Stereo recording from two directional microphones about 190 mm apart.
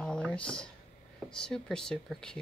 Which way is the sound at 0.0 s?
5° left (ahead or behind).